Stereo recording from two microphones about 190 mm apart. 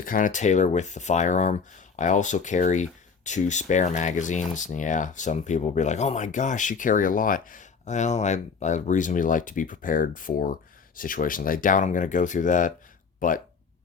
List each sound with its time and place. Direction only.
0.0 s speech: 45° left (ahead or behind)